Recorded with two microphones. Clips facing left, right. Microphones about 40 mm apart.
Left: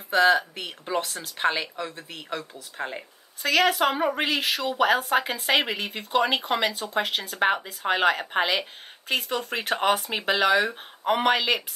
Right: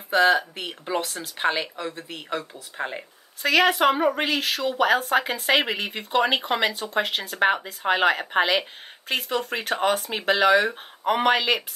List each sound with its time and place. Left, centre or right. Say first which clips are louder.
0.1 s a woman's voice: right 1 dB; centre
4.1 s speech: right 1 dB; centre
9.7 s speech: left 1 dB; centre
10.1 s speech: right 6 dB; centre